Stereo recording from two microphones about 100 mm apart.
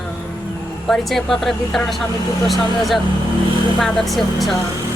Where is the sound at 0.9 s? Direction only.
Centre (ahead or behind).